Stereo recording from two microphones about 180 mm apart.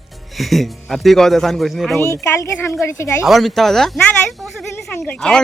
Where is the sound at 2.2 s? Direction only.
15° left (ahead or behind).